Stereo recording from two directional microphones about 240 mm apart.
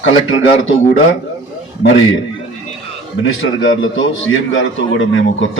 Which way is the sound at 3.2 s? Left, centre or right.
Left.